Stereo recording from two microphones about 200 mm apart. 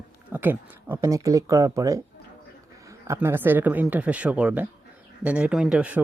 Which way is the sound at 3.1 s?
10° right (ahead or behind).